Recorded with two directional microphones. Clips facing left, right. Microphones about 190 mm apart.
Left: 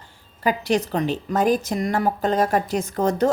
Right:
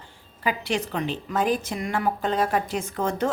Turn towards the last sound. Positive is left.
turn(degrees=40)  # may be behind; listen again after turning